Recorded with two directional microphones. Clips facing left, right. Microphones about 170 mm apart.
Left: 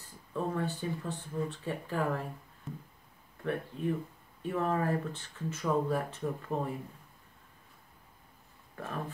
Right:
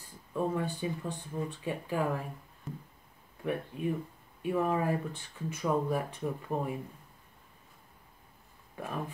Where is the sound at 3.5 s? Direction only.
15° right (ahead or behind).